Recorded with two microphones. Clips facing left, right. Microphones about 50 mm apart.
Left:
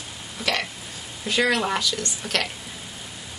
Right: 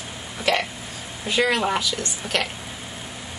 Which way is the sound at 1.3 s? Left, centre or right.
Centre.